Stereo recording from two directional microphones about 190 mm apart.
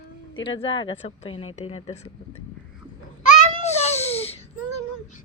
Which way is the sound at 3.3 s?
35° left (ahead or behind).